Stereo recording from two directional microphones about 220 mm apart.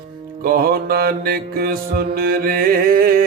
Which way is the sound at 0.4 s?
45° right (ahead or behind).